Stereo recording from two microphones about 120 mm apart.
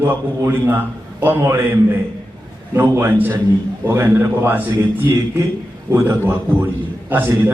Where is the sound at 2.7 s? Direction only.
20° right (ahead or behind).